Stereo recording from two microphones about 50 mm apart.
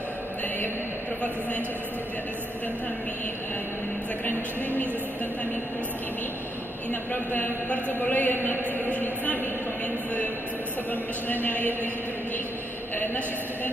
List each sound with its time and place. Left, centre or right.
6.9 s a woman's voice: left
10.9 s a woman's voice: left
12.9 s a sound: left